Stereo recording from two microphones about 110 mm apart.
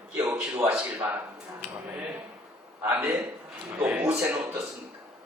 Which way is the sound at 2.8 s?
15° right (ahead or behind).